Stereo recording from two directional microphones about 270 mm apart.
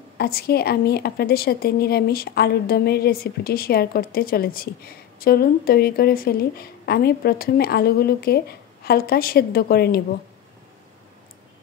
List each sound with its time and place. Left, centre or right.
0.2 s a woman's voice: left